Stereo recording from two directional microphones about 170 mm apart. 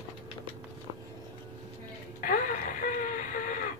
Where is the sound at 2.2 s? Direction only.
50° left (ahead or behind).